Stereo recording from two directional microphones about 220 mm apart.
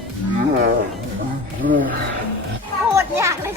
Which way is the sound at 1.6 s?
40° right (ahead or behind).